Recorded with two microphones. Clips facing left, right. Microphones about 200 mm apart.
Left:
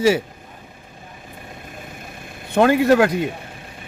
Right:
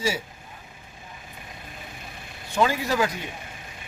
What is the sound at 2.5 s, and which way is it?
Speech, 60° left (ahead or behind).